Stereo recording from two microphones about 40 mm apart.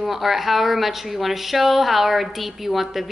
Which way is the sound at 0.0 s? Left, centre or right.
Centre.